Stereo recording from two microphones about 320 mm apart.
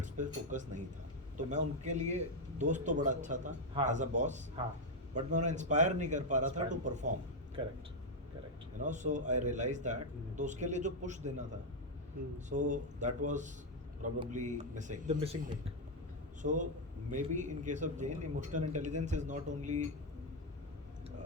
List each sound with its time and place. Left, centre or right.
0.0 s a man's voice: right
8.8 s a man's voice: right
12.5 s a man's voice: right
16.4 s a man's voice: right